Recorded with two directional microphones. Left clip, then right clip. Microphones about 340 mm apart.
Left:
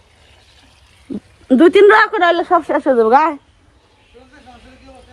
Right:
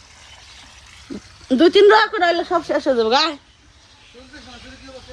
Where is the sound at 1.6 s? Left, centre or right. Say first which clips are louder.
Left 3 dB; centre.